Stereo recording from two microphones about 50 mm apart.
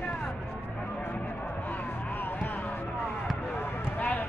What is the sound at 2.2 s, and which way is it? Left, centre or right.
Music, left.